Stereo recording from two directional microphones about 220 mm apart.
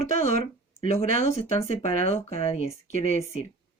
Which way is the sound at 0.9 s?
30° left (ahead or behind).